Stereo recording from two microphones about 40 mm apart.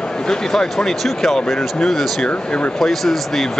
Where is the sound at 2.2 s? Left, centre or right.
Left.